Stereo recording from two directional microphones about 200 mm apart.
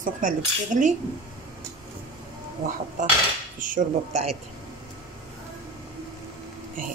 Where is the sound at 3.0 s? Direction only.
40° right (ahead or behind).